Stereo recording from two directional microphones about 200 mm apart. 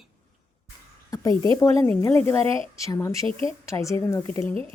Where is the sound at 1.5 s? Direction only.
10° left (ahead or behind).